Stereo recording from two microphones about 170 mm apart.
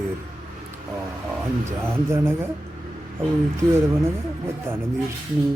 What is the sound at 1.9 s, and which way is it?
Speech, 15° right (ahead or behind).